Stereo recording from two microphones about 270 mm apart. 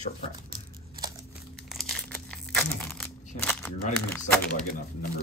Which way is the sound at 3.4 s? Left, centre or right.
Centre.